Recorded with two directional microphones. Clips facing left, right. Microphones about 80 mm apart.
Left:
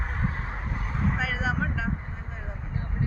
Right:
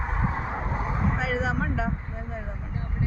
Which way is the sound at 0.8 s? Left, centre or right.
Centre.